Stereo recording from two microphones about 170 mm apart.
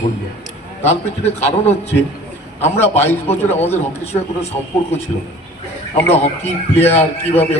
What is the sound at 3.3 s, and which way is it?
Speech, 40° left (ahead or behind).